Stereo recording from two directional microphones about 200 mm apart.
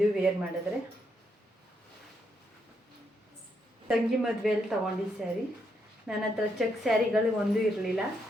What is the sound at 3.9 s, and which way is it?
A woman's voice, centre (ahead or behind).